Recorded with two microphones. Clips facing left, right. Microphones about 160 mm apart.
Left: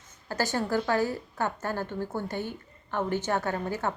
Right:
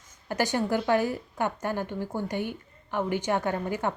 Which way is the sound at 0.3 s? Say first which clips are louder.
Right 2 dB; 20° right (ahead or behind).